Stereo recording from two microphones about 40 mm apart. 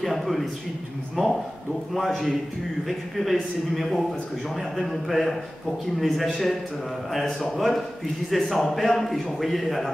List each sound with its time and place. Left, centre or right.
0.0 s a man's voice: centre
2.0 s a man's voice: centre